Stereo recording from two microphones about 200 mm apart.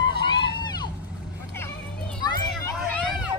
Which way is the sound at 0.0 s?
25° left (ahead or behind).